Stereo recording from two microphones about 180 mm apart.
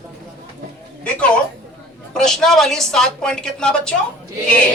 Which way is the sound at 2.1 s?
5° left (ahead or behind).